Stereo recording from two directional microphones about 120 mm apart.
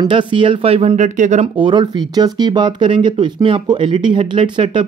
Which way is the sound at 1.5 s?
40° right (ahead or behind).